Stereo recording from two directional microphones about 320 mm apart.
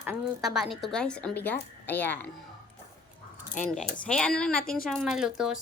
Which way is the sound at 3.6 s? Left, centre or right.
Left.